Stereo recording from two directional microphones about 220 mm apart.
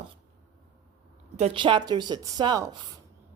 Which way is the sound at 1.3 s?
25° right (ahead or behind).